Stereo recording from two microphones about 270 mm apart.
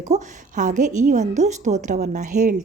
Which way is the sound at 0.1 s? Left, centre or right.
Right.